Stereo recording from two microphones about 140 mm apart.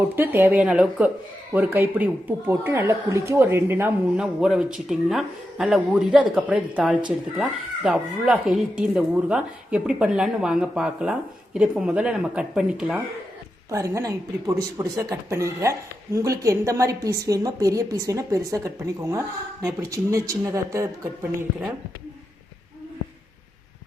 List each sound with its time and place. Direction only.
0.2 s speech: 15° right (ahead or behind)
13.7 s a woman's voice: 20° right (ahead or behind)